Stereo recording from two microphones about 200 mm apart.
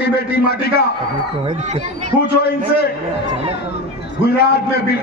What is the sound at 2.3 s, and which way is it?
Speech, 50° left (ahead or behind).